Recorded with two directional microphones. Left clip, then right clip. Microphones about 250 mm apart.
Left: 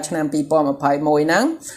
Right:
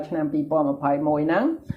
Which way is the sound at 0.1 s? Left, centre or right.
Left.